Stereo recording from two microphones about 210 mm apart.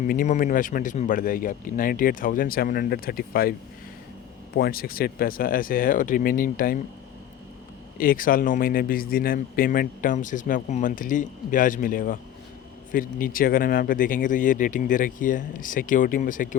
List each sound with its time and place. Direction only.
0.0 s speech: 40° left (ahead or behind)
4.5 s speech: 45° left (ahead or behind)
7.9 s speech: 40° left (ahead or behind)